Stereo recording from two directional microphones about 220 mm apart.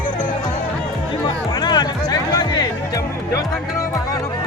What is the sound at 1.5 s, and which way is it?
Music, 20° left (ahead or behind).